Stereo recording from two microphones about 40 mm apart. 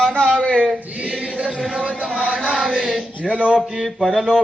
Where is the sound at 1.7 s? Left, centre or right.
Right.